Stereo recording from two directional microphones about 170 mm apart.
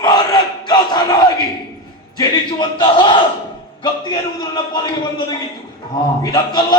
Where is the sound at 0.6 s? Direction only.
25° left (ahead or behind).